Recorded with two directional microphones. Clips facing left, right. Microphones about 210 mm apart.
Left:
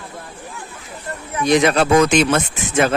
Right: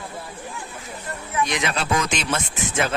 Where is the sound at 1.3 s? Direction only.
35° left (ahead or behind); by 2.9 s 55° left (ahead or behind).